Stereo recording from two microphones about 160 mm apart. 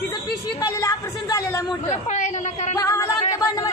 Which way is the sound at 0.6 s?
20° left (ahead or behind).